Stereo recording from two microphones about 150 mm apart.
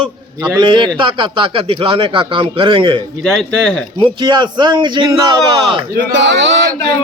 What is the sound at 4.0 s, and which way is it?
Speech, 30° right (ahead or behind).